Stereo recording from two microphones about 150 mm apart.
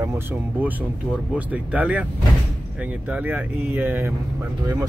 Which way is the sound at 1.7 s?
10° right (ahead or behind).